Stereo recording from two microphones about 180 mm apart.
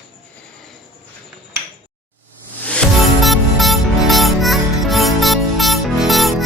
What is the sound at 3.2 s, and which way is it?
Music, centre (ahead or behind).